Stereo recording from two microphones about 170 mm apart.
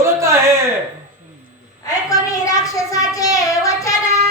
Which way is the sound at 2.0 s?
20° left (ahead or behind).